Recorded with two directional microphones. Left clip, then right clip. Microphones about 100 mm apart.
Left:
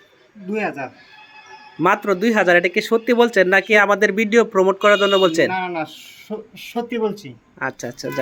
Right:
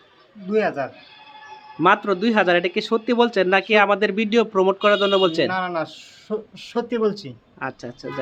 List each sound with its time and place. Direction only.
0.5 s speech: 25° right (ahead or behind)
1.8 s speech: 15° left (ahead or behind)
5.5 s speech: 25° right (ahead or behind)
7.6 s speech: 5° left (ahead or behind)